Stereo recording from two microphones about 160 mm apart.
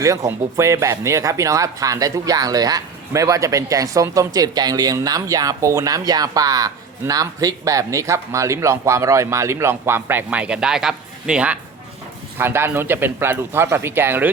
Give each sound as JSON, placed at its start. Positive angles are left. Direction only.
{"t": 0.0, "sound": "speech", "side_deg": -20}